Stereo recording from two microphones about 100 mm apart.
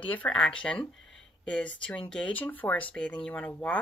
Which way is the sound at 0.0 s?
15° left (ahead or behind).